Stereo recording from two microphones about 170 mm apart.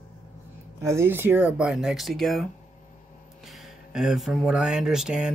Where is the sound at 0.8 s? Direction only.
15° right (ahead or behind).